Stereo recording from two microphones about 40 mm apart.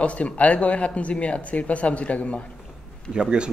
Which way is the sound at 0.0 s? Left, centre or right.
Left.